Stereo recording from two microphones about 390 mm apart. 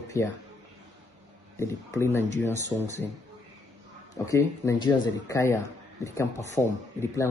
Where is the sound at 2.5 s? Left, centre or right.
Centre.